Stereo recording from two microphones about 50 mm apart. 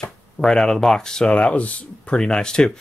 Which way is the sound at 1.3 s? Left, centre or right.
Left.